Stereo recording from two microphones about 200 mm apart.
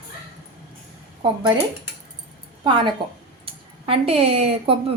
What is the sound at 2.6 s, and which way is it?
A woman's voice, 25° right (ahead or behind).